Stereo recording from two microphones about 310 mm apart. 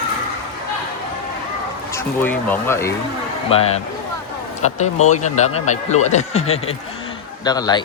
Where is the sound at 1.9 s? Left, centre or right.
Centre.